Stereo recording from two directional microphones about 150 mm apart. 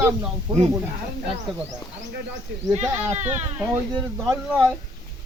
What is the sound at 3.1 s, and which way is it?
Speech, 50° right (ahead or behind).